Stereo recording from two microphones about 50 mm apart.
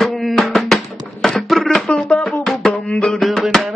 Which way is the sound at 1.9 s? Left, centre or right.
Centre.